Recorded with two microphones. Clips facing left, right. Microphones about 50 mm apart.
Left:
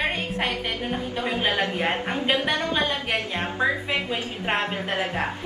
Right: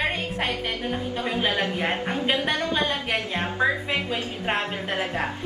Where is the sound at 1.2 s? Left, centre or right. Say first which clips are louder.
Left 1 dB; left.